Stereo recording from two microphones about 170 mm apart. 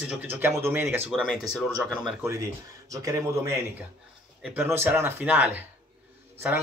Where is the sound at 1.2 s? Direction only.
Centre (ahead or behind).